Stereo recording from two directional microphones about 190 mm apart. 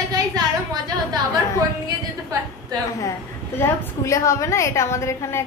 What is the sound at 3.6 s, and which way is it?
A woman's voice, 15° left (ahead or behind).